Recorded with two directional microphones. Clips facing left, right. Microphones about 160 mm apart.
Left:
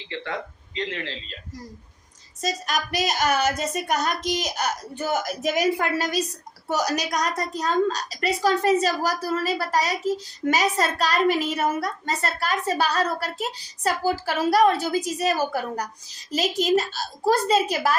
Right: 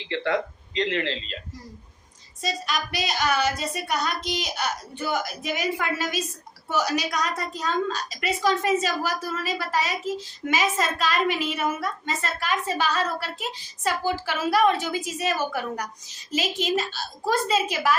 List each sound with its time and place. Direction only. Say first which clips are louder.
0.1 s speech: right 6 dB; 80° right
2.4 s a woman's voice: left 2 dB; 45° left (ahead or behind)